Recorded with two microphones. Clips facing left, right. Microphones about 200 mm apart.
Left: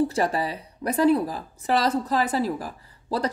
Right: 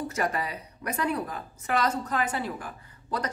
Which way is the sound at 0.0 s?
30° left (ahead or behind).